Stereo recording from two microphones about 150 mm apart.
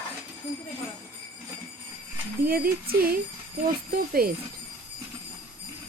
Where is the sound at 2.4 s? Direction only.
80° right.